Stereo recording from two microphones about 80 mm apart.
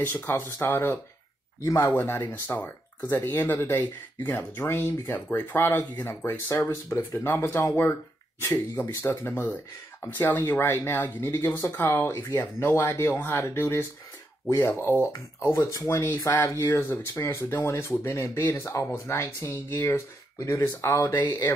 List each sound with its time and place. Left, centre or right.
0.0 s speech: left
5.9 s speech: left